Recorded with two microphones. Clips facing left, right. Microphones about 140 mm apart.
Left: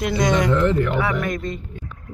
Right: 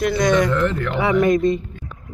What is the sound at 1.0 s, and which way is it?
Speech, 20° right (ahead or behind).